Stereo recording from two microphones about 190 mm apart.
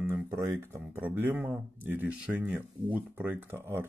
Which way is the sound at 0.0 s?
15° right (ahead or behind).